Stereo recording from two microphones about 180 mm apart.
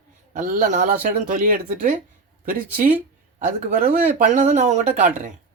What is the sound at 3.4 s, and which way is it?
A man's voice, 50° right (ahead or behind).